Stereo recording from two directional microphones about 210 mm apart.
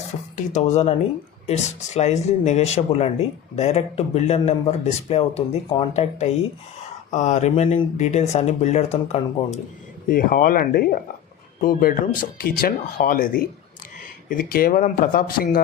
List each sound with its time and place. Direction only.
0.3 s speech: 35° left (ahead or behind)
10.1 s speech: 40° left (ahead or behind)